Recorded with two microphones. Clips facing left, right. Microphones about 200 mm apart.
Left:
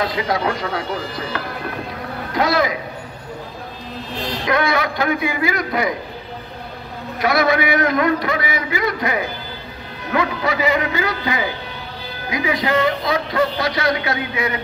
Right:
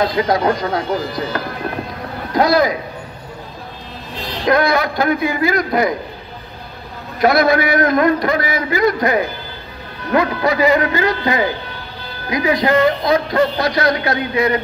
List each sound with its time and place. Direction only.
0.0 s a man's voice: 40° right (ahead or behind)
2.3 s a man's voice: 40° right (ahead or behind)
4.5 s a man's voice: 40° right (ahead or behind)
7.2 s a man's voice: 40° right (ahead or behind)